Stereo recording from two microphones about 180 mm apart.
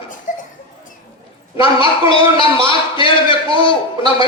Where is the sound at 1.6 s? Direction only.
30° left (ahead or behind).